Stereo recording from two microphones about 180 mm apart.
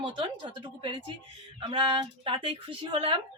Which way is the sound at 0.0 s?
25° right (ahead or behind).